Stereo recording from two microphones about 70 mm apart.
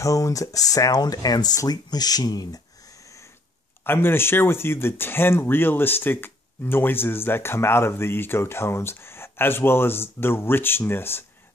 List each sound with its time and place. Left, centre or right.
0.0 s speech: left
3.8 s speech: left